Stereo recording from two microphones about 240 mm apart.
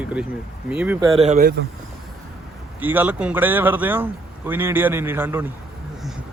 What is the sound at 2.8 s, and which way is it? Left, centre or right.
Speech, centre.